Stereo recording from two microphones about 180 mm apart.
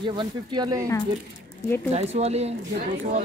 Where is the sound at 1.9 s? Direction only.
35° right (ahead or behind).